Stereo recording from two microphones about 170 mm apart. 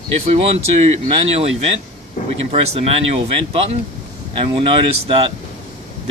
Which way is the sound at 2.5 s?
35° right (ahead or behind).